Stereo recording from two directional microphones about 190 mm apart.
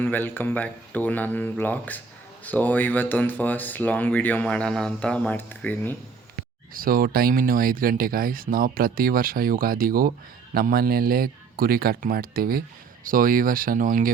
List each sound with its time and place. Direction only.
0.0 s speech: 10° left (ahead or behind)
6.7 s speech: 50° right (ahead or behind)